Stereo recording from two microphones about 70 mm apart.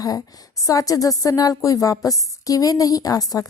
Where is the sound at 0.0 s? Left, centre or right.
Left.